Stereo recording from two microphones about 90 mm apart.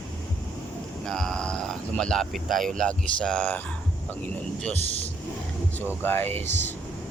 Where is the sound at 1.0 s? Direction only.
5° left (ahead or behind).